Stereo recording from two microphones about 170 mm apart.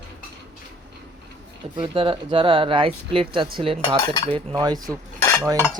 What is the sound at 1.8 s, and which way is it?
Speech, 30° right (ahead or behind).